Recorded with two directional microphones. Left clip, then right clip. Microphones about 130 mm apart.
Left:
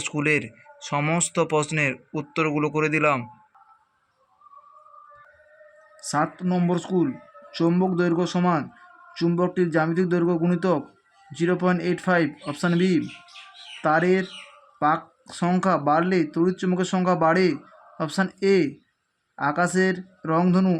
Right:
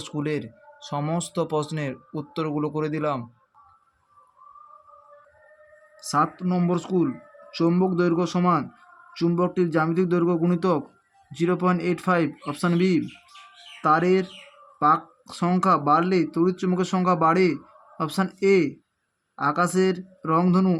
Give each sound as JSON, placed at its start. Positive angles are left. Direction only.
{"t": 0.2, "sound": "speech", "side_deg": -15}
{"t": 0.9, "sound": "speech", "side_deg": 15}
{"t": 1.2, "sound": "speech", "side_deg": -15}
{"t": 6.0, "sound": "speech", "side_deg": 0}